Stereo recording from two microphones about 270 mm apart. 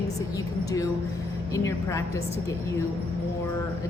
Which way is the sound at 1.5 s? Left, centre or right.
Centre.